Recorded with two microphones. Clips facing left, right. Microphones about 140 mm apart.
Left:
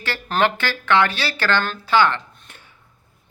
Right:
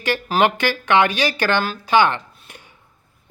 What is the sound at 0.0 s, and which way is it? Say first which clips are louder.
Speech: right 3 dB; 15° right (ahead or behind).